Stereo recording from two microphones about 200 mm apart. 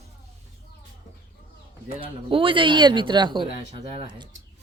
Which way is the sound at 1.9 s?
25° right (ahead or behind).